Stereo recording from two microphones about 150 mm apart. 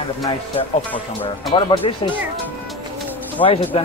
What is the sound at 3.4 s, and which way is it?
Speech, 35° left (ahead or behind).